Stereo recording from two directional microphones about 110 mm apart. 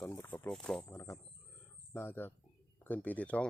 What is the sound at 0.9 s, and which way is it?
Speech, 30° left (ahead or behind).